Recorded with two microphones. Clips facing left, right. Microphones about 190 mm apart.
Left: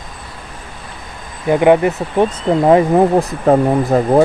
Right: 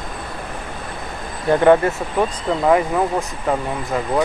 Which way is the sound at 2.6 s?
30° left (ahead or behind).